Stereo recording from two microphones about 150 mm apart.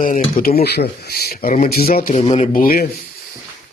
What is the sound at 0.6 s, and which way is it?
Speech, 90° left.